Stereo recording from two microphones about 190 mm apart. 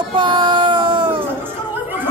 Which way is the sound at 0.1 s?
25° right (ahead or behind).